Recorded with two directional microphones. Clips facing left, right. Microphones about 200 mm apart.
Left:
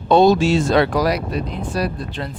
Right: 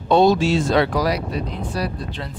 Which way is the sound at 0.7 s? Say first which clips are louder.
Left 2 dB; 50° left (ahead or behind).